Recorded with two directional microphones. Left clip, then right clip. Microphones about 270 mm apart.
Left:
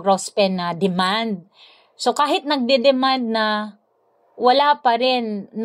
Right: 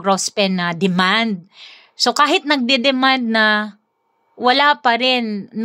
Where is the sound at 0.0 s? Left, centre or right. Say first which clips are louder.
Even; right.